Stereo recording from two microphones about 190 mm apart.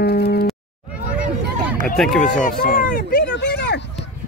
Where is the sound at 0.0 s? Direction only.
55° left (ahead or behind).